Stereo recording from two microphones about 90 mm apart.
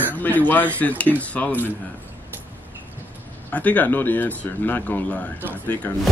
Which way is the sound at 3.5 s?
15° left (ahead or behind).